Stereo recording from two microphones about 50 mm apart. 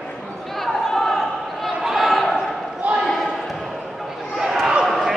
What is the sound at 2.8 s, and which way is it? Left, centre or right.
Basketball bounce, right.